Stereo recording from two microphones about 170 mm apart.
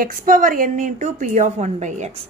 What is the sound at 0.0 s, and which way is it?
A woman's voice, 55° right (ahead or behind).